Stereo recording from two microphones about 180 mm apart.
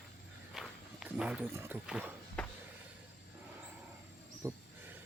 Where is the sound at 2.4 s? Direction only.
5° left (ahead or behind).